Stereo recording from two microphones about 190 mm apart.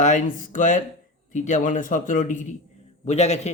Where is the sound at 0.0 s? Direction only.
40° left (ahead or behind).